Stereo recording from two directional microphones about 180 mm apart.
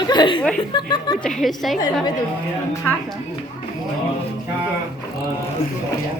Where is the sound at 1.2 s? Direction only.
Centre (ahead or behind).